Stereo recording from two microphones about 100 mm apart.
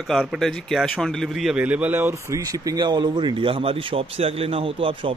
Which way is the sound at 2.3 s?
35° right (ahead or behind).